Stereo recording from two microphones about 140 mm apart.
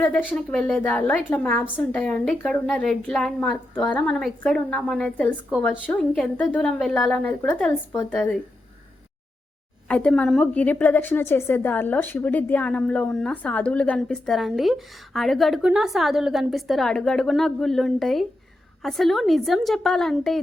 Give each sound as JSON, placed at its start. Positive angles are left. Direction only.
{"t": 0.3, "sound": "a woman's voice", "side_deg": 5}
{"t": 9.9, "sound": "a woman's voice", "side_deg": 10}